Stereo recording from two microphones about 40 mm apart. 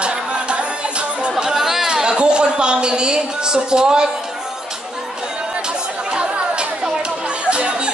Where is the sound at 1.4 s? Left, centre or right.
Centre.